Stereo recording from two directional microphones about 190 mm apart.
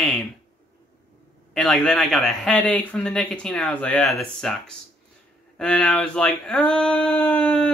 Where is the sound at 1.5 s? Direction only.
5° left (ahead or behind).